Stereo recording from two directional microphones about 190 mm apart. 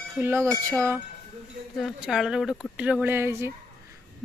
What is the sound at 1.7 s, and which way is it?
Speech, centre (ahead or behind).